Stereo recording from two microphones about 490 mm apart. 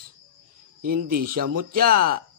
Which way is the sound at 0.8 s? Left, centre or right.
Centre.